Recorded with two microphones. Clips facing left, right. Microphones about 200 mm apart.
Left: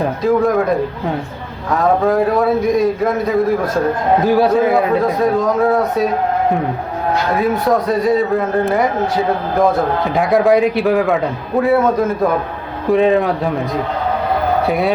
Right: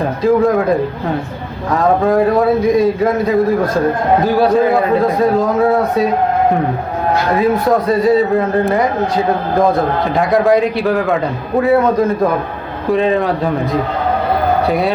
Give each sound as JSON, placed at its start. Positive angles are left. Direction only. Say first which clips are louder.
{"t": 0.2, "sound": "a man's voice", "louder": "right 3 dB", "side_deg": 0}
{"t": 1.7, "sound": "a man's voice", "louder": "right 1 dB", "side_deg": 0}
{"t": 7.3, "sound": "a man's voice", "louder": "right 2 dB", "side_deg": 0}
{"t": 14.7, "sound": "a man's voice", "louder": "right 1 dB", "side_deg": 0}